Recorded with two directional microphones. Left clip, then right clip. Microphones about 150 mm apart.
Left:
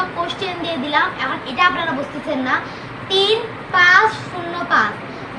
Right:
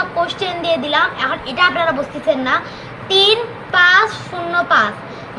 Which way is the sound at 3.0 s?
10° right (ahead or behind).